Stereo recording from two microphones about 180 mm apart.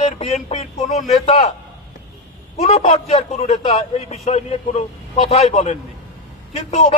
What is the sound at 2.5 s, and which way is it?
A man's voice, 40° left (ahead or behind).